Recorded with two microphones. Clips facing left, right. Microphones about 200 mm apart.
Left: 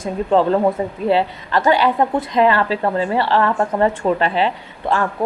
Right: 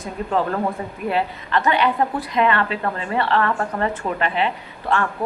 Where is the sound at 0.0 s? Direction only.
30° left (ahead or behind).